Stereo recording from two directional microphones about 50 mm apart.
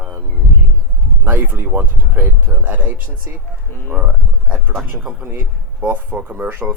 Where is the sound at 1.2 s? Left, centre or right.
Right.